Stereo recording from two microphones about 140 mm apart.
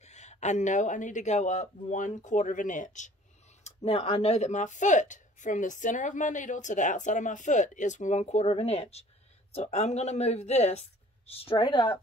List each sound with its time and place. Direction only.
0.0 s speech: 55° left (ahead or behind)
3.6 s speech: 50° left (ahead or behind)